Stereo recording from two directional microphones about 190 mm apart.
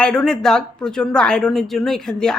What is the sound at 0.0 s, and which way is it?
Speech, 5° left (ahead or behind).